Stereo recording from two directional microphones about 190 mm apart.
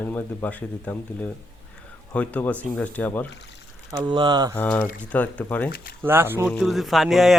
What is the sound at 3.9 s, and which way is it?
Speech, 20° right (ahead or behind).